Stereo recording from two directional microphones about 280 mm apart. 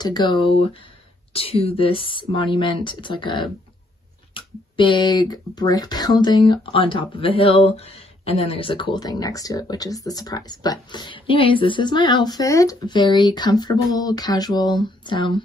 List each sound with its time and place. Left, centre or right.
0.0 s a woman's voice: centre